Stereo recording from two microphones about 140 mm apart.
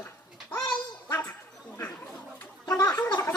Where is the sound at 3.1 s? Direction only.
25° left (ahead or behind).